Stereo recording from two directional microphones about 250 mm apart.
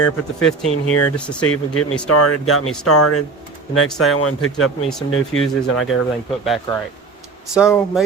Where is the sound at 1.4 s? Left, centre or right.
Left.